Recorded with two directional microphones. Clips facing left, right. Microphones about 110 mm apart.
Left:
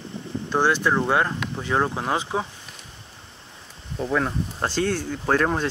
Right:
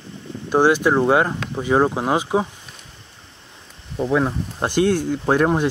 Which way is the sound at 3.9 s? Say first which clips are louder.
Right 4 dB; 10° right (ahead or behind).